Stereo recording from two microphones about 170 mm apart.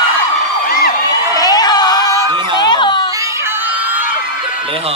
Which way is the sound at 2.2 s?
30° right (ahead or behind).